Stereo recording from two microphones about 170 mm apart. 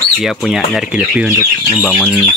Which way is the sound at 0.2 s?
5° right (ahead or behind).